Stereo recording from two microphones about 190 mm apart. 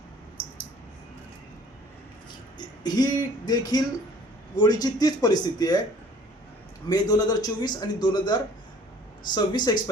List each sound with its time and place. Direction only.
2.6 s a man's voice: 20° left (ahead or behind)
6.8 s a man's voice: 20° left (ahead or behind)